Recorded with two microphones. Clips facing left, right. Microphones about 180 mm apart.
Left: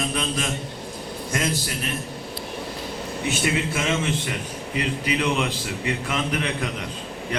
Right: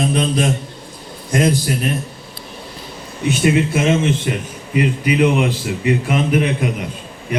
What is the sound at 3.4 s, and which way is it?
A man's voice, 25° right (ahead or behind).